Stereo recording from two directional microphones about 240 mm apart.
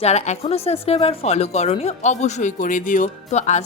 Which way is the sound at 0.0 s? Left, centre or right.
Left.